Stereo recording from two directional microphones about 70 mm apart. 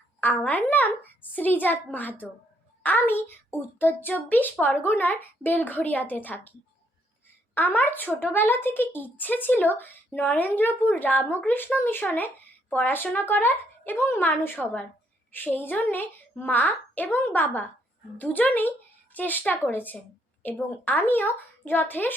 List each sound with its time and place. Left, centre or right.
0.2 s a woman's voice: left
7.5 s a woman's voice: left